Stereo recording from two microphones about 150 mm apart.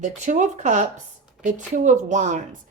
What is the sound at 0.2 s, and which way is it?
Speech, 55° right (ahead or behind).